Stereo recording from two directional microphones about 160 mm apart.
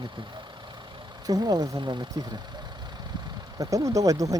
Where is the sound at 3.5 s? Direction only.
20° right (ahead or behind).